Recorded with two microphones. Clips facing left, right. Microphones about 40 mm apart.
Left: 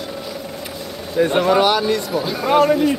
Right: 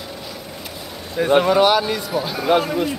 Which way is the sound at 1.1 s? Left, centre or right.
Centre.